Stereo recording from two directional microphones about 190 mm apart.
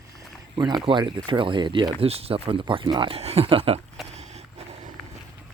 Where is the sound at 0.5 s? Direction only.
20° right (ahead or behind).